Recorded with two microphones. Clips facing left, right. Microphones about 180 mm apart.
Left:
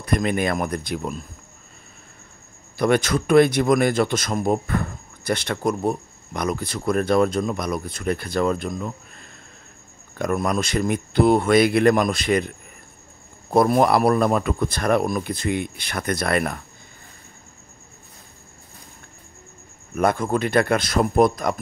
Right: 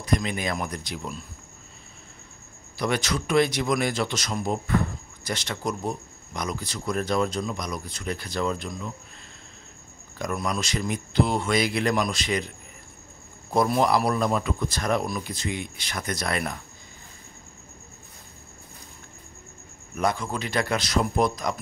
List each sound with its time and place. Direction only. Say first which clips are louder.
0.0 s a man's voice: left 5 dB; 55° left (ahead or behind)
2.8 s a man's voice: left 7 dB; 55° left (ahead or behind)
10.1 s speech: left 6 dB; 55° left (ahead or behind)
20.0 s a man's voice: left 6 dB; 55° left (ahead or behind)